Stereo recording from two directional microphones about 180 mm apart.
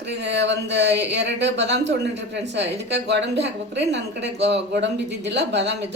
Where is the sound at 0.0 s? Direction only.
70° right (ahead or behind).